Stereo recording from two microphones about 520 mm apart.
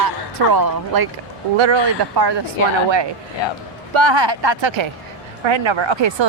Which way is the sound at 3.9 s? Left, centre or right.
Right.